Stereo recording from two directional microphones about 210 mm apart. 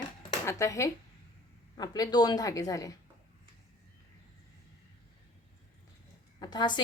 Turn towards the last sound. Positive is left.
turn(degrees=20)  # may be behind; listen again after turning